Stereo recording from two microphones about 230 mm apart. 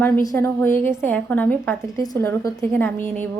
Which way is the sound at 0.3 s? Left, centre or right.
Centre.